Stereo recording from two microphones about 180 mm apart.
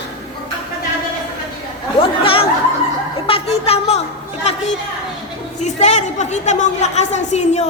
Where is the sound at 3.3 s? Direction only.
35° left (ahead or behind).